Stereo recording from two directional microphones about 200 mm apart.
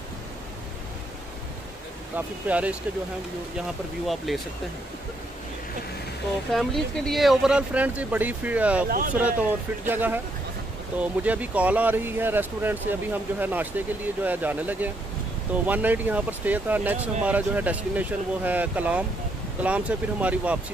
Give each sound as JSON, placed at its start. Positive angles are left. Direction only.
{"t": 2.1, "sound": "speech", "side_deg": -5}
{"t": 4.3, "sound": "speech", "side_deg": 0}
{"t": 6.5, "sound": "speech", "side_deg": 0}
{"t": 8.8, "sound": "speech", "side_deg": -45}
{"t": 9.1, "sound": "speech", "side_deg": -5}